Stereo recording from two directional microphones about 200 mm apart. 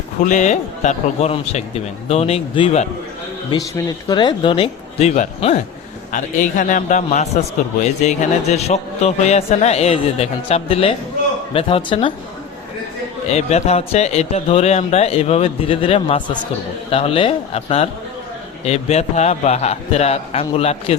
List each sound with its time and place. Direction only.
0.2 s speech: 35° left (ahead or behind)
3.5 s speech: 20° left (ahead or behind)
13.3 s speech: 30° left (ahead or behind)